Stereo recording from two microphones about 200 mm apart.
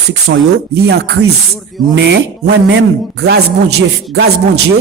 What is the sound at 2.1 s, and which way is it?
Speech, 60° right (ahead or behind).